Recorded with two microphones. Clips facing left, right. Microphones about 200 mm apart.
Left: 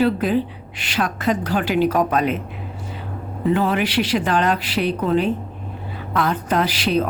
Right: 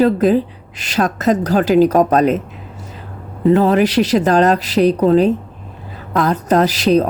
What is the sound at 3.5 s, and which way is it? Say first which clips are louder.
Speech: right 7 dB; 40° right (ahead or behind).